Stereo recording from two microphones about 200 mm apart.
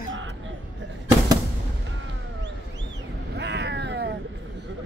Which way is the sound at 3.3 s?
60° right (ahead or behind).